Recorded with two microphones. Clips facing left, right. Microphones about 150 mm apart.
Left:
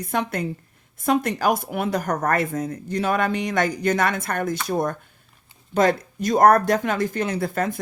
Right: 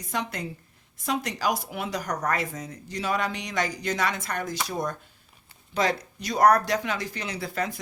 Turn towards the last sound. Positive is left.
turn(degrees=50)  # may be behind; listen again after turning